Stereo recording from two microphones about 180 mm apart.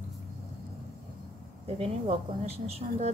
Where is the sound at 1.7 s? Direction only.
35° right (ahead or behind).